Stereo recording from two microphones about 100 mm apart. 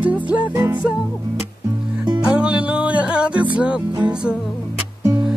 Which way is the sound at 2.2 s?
10° right (ahead or behind).